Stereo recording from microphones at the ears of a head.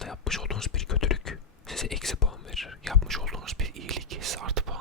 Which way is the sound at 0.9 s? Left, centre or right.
Left.